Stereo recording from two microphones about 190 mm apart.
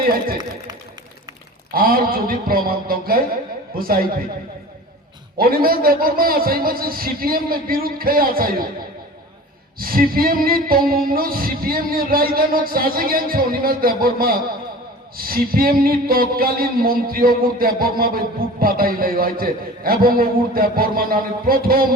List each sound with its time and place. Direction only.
0.0 s a man's voice: 50° right (ahead or behind)
1.7 s a man's voice: 50° right (ahead or behind)
5.4 s a man's voice: 50° right (ahead or behind)
9.7 s a man's voice: 50° right (ahead or behind)